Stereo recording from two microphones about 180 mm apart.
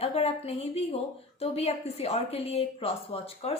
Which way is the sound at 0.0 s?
35° left (ahead or behind).